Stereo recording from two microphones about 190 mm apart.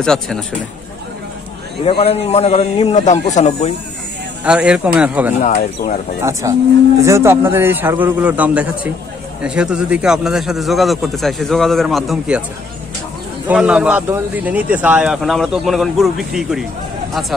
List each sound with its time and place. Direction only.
0.0 s a man's voice: 5° left (ahead or behind)
1.9 s a man's voice: 30° left (ahead or behind)
4.5 s a man's voice: 5° right (ahead or behind)
6.4 s a man's voice: 15° right (ahead or behind)
13.5 s a man's voice: 5° right (ahead or behind)